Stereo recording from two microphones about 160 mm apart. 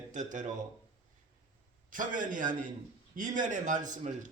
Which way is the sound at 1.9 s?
55° right (ahead or behind).